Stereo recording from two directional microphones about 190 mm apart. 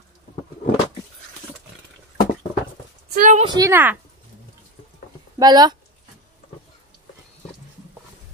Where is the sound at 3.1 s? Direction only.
40° right (ahead or behind).